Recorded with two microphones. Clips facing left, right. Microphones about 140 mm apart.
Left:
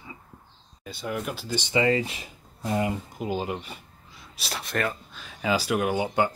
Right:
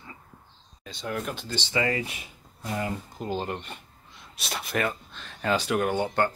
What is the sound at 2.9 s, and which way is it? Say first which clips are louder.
Speech: left 2 dB; 10° left (ahead or behind).